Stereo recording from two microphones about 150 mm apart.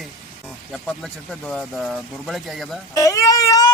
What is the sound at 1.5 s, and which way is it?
Speech, centre (ahead or behind).